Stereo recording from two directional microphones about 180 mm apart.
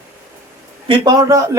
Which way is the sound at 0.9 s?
20° right (ahead or behind).